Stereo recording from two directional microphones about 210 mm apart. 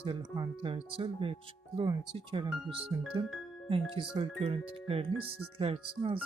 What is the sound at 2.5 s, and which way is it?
Speech, centre (ahead or behind).